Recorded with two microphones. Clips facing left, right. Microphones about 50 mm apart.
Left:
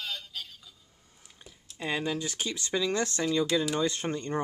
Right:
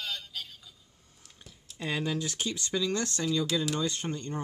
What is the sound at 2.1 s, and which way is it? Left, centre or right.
Speech, centre.